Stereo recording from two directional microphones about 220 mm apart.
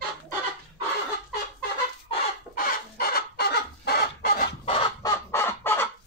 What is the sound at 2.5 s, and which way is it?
Chicken, 40° left (ahead or behind).